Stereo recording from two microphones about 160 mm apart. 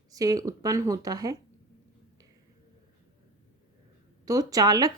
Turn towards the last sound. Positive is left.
turn(degrees=-25)  # may be behind; listen again after turning